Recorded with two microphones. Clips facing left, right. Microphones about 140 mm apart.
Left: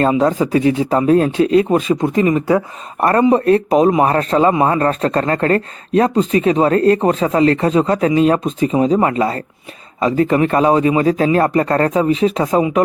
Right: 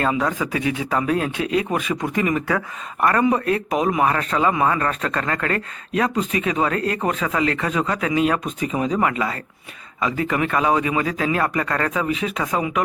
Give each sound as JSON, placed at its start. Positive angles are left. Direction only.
{"t": 0.0, "sound": "speech", "side_deg": 30}